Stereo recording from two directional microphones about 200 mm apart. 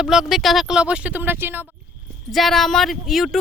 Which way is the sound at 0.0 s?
Centre (ahead or behind).